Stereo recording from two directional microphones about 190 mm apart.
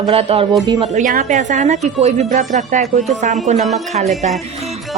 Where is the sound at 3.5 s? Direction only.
Centre (ahead or behind).